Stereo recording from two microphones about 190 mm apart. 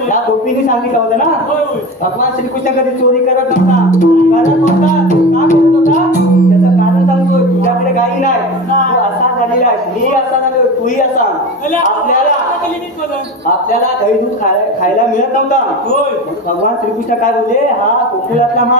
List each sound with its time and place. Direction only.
4.0 s speech: 40° left (ahead or behind)
5.5 s music: 40° left (ahead or behind)